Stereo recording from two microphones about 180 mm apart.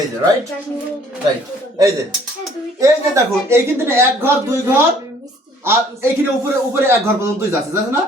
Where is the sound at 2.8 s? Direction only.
15° right (ahead or behind).